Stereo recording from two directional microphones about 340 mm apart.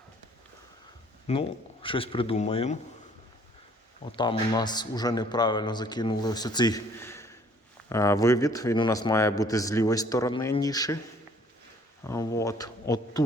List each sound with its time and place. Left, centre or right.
1.3 s speech: centre
4.0 s speech: centre
12.0 s a man's voice: centre